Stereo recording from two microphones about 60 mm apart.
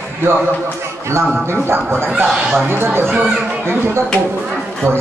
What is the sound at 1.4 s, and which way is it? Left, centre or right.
Speech, right.